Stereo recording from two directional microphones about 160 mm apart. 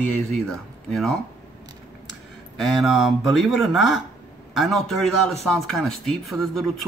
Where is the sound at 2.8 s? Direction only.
Centre (ahead or behind).